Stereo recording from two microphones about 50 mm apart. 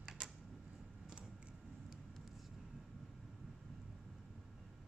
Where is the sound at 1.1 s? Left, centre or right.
Right.